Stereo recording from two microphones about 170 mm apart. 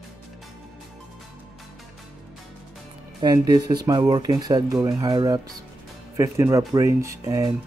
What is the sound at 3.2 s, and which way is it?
Speech, 25° right (ahead or behind).